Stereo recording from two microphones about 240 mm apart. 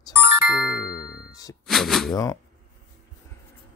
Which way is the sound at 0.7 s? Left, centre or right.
Left.